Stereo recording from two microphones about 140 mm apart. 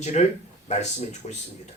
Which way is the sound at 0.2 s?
55° left (ahead or behind).